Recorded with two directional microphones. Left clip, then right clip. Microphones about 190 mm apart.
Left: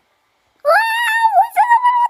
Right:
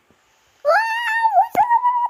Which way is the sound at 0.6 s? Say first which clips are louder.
Left 4 dB; 5° left (ahead or behind).